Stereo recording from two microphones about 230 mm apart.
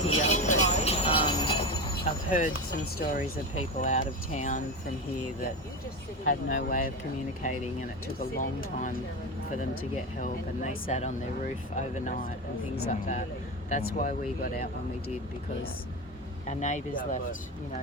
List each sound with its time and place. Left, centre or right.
0.1 s train: left
2.3 s speech: left
6.5 s speech: left
10.2 s speech: left
16.5 s speech: left